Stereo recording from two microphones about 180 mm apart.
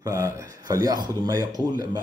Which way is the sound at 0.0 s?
15° right (ahead or behind).